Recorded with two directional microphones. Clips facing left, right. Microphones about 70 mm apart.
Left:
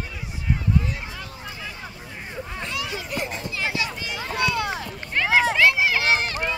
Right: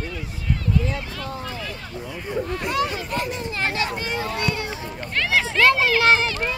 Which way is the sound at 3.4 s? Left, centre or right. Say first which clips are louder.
Right 2 dB; right.